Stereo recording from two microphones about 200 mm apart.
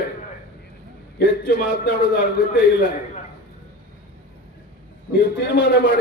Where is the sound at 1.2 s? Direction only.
60° left (ahead or behind).